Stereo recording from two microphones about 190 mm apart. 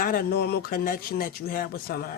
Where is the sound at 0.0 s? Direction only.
50° left (ahead or behind).